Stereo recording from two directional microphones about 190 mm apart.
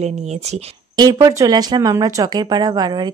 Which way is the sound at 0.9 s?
20° right (ahead or behind).